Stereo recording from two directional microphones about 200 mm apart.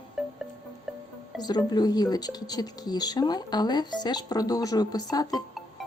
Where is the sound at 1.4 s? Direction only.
20° left (ahead or behind).